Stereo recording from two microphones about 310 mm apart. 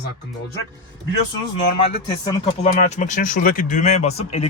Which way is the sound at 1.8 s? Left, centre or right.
Left.